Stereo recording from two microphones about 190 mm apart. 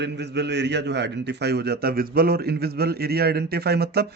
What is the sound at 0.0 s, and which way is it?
A man's voice, 65° right (ahead or behind).